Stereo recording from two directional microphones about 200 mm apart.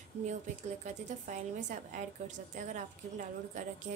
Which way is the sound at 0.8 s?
35° right (ahead or behind).